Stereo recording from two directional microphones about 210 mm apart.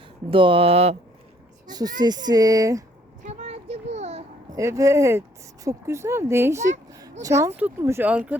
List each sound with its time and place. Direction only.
0.3 s speech: 25° right (ahead or behind)
1.6 s speech: 20° right (ahead or behind)
3.2 s a sound: 30° right (ahead or behind)
4.5 s speech: 15° right (ahead or behind)